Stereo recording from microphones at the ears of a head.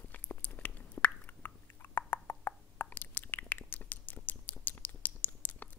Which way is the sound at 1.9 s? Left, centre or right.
Left.